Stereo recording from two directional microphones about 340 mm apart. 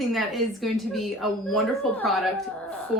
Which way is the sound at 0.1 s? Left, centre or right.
Centre.